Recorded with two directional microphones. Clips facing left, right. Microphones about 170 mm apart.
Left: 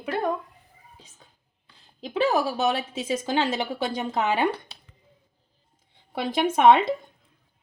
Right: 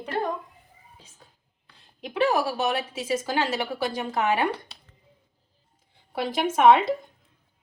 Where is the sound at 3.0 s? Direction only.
20° left (ahead or behind).